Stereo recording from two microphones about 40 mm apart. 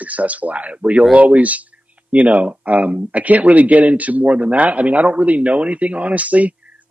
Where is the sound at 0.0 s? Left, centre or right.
Right.